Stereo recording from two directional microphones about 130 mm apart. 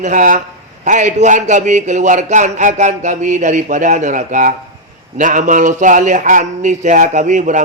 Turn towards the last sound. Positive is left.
turn(degrees=-75)  # may be behind; listen again after turning